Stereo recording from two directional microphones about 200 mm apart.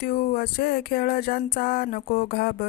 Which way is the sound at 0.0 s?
50° left (ahead or behind).